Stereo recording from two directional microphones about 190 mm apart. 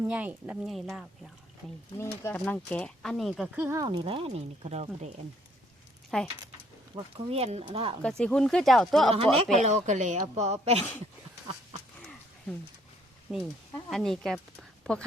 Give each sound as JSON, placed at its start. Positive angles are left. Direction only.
{"t": 0.0, "sound": "speech", "side_deg": -10}
{"t": 2.0, "sound": "speech", "side_deg": 15}
{"t": 6.1, "sound": "speech", "side_deg": 5}
{"t": 6.9, "sound": "speech", "side_deg": -30}
{"t": 8.2, "sound": "speech", "side_deg": 5}
{"t": 9.1, "sound": "speech", "side_deg": -30}
{"t": 13.3, "sound": "speech", "side_deg": 0}